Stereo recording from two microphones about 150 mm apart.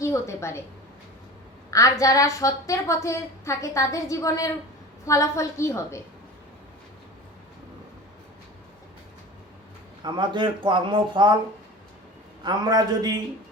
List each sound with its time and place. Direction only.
0.0 s a woman's voice: 20° left (ahead or behind)
1.7 s a woman's voice: 20° left (ahead or behind)
10.0 s speech: 30° right (ahead or behind)
12.4 s a man's voice: 25° right (ahead or behind)